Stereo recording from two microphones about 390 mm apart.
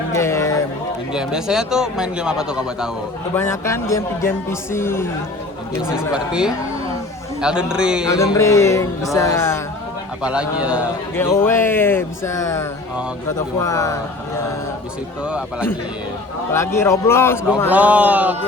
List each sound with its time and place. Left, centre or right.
0.1 s a sound: centre
1.1 s a man's voice: centre
8.1 s a man's voice: centre
15.2 s a man's voice: centre